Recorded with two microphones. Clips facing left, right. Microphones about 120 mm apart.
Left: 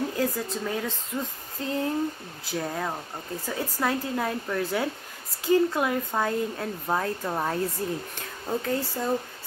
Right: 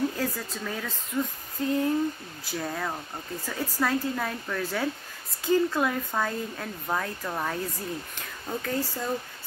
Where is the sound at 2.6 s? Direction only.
20° left (ahead or behind).